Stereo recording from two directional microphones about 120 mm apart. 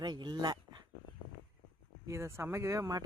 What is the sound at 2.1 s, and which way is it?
Speech, 20° right (ahead or behind).